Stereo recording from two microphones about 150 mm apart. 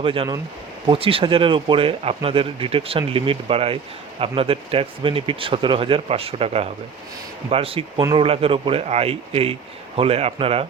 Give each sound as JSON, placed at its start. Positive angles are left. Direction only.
{"t": 0.0, "sound": "speech", "side_deg": -35}